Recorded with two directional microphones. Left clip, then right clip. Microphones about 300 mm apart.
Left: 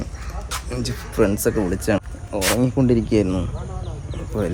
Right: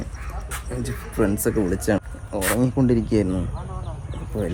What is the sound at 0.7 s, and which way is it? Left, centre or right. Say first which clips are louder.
Speech: left 3 dB; centre.